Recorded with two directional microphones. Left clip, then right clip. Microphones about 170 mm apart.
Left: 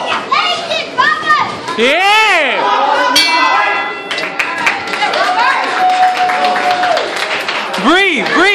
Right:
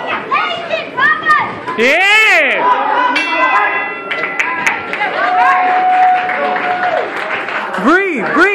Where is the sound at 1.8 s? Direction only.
20° left (ahead or behind).